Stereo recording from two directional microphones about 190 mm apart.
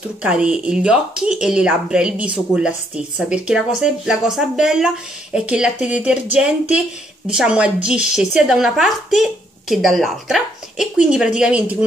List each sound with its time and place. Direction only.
0.2 s a woman's voice: 5° right (ahead or behind)